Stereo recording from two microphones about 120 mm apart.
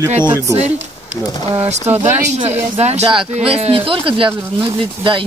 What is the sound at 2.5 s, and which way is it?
Speech, 65° right (ahead or behind).